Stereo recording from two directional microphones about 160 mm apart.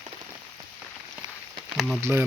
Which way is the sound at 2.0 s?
15° right (ahead or behind).